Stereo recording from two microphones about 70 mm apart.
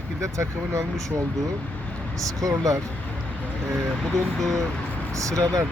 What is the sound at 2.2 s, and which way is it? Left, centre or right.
Speech, right.